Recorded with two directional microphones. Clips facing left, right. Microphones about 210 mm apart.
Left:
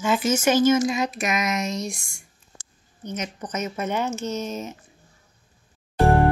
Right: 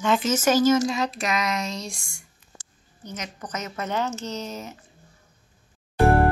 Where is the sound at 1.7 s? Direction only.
30° right (ahead or behind).